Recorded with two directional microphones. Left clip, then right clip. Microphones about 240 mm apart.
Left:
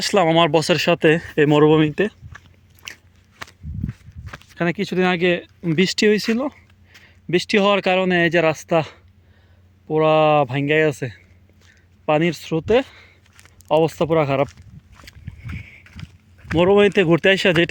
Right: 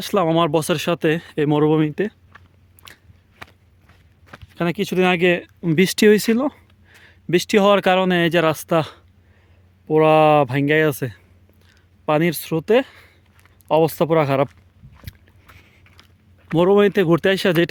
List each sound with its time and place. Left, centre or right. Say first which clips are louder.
0.0 s speech: left 2 dB; centre
2.3 s biting: left 4 dB; left
3.4 s walk: left 4 dB; left
4.3 s a sound: left 4 dB; left
4.5 s speech: right 1 dB; centre
12.0 s speech: even; centre
15.0 s boat: left 1 dB; centre
15.5 s rowboat: left 12 dB; centre
16.6 s speech: even; centre